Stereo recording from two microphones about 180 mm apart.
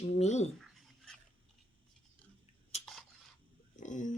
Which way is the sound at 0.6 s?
Centre (ahead or behind).